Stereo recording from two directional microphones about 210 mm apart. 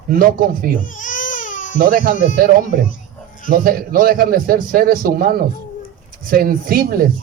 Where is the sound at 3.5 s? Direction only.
45° right (ahead or behind).